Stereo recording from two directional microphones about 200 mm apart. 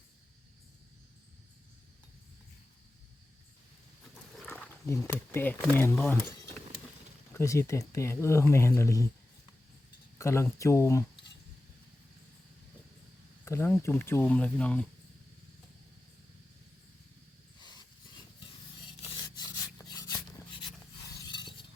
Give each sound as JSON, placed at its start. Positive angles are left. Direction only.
{"t": 4.4, "sound": "wild animals", "side_deg": 5}
{"t": 5.7, "sound": "speech", "side_deg": 10}
{"t": 7.3, "sound": "speech", "side_deg": 15}
{"t": 10.2, "sound": "speech", "side_deg": 15}
{"t": 13.4, "sound": "speech", "side_deg": 10}
{"t": 19.0, "sound": "a sound", "side_deg": 20}